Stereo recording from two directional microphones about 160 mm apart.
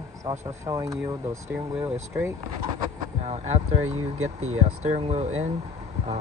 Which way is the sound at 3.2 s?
45° right (ahead or behind).